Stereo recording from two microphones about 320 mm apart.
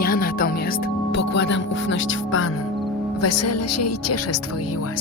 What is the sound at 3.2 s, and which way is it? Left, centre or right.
Speech, left.